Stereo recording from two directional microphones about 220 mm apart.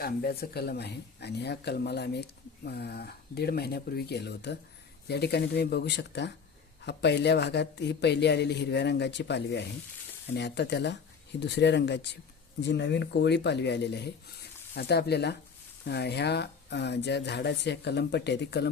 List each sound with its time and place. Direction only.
0.0 s speech: 45° left (ahead or behind)